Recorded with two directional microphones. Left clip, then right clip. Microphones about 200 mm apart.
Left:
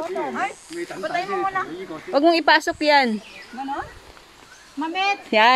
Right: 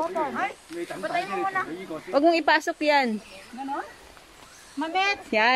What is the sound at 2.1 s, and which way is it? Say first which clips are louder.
Speech: left 4 dB; 15° left (ahead or behind).